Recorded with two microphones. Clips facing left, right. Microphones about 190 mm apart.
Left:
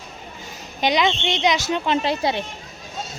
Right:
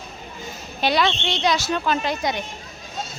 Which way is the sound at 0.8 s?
15° left (ahead or behind).